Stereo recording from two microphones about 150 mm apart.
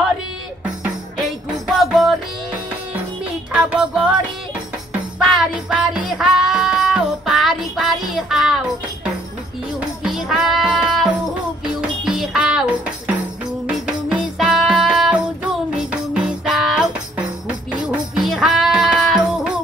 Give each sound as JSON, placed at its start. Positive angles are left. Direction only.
{"t": 1.8, "sound": "music", "side_deg": 0}
{"t": 3.5, "sound": "child singing", "side_deg": -5}
{"t": 5.2, "sound": "music", "side_deg": -5}
{"t": 9.8, "sound": "music", "side_deg": -5}